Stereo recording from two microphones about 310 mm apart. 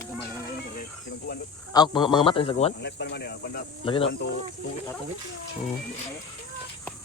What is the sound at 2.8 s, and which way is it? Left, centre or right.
Speech, left.